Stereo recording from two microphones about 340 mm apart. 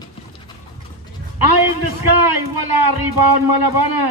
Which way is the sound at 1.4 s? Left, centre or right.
Right.